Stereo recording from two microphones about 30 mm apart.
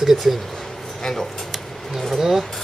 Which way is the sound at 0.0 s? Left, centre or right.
Centre.